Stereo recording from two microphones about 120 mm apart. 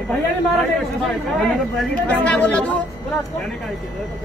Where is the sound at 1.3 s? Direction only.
5° left (ahead or behind).